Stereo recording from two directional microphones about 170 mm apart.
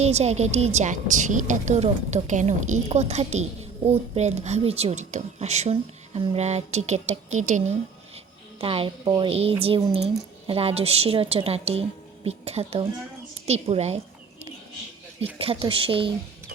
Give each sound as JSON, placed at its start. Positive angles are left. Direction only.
{"t": 0.0, "sound": "a woman's voice", "side_deg": -40}
{"t": 8.1, "sound": "a woman's voice", "side_deg": -35}
{"t": 15.4, "sound": "speech", "side_deg": -35}